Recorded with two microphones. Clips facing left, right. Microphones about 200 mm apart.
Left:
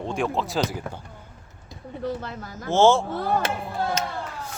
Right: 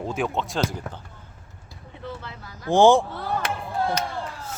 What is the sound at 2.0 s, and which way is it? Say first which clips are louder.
Speech: left 6 dB; 45° left (ahead or behind).